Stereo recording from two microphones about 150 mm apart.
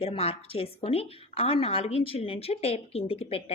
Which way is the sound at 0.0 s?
40° left (ahead or behind).